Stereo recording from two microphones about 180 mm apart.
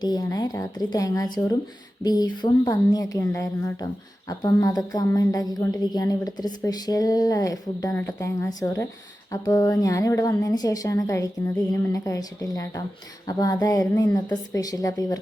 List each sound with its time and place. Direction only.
0.0 s a woman's voice: 20° left (ahead or behind)